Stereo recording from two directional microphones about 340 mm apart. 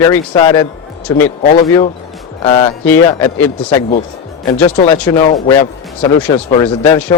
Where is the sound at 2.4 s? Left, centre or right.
Centre.